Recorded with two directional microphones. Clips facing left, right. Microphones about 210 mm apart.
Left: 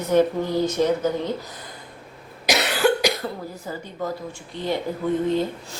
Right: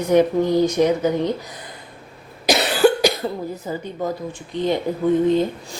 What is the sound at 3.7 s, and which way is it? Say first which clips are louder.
Speech: right 3 dB; 20° right (ahead or behind).